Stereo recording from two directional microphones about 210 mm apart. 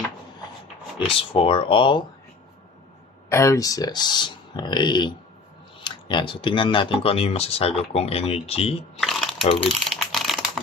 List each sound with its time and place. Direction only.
0.9 s speech: 25° left (ahead or behind)
3.2 s speech: 15° left (ahead or behind)
9.0 s shuffling cards: centre (ahead or behind)
9.6 s typing: centre (ahead or behind)